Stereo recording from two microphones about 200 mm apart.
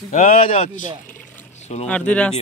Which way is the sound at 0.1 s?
35° left (ahead or behind).